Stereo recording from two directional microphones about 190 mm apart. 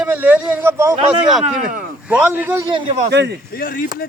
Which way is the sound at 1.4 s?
45° right (ahead or behind).